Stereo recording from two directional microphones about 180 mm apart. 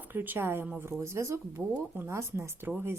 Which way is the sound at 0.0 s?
10° right (ahead or behind).